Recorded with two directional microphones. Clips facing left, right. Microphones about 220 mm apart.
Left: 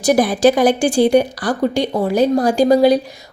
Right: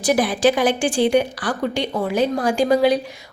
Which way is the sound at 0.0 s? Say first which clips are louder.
Left 4 dB; 40° left (ahead or behind).